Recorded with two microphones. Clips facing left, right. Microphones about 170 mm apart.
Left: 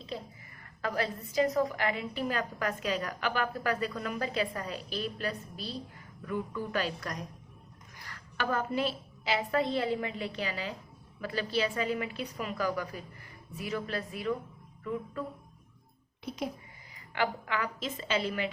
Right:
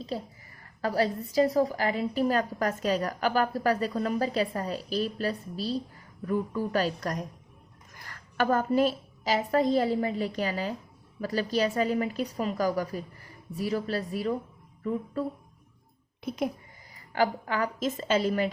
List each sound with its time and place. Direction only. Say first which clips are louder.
0.1 s a woman's voice: right 3 dB; 40° right (ahead or behind)
16.2 s speech: right 6 dB; 55° right (ahead or behind)
16.9 s a woman's voice: right 5 dB; 40° right (ahead or behind)